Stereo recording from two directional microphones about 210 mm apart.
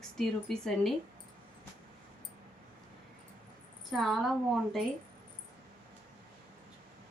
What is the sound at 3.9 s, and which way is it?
Speech, centre (ahead or behind).